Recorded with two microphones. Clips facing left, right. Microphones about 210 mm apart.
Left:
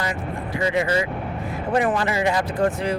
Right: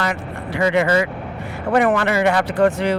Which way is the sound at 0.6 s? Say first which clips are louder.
Right 5 dB; 70° right (ahead or behind).